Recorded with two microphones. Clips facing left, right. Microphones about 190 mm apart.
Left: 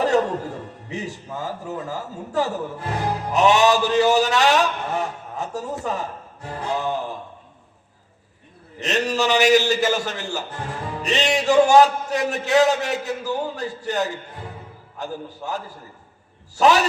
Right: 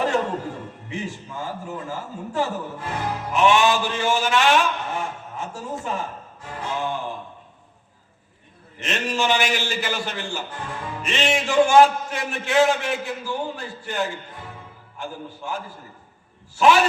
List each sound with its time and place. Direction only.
0.1 s a man's voice: 40° left (ahead or behind)
8.8 s a man's voice: 40° left (ahead or behind)